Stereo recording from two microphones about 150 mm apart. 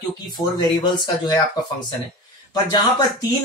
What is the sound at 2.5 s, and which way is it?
Speech, 30° left (ahead or behind).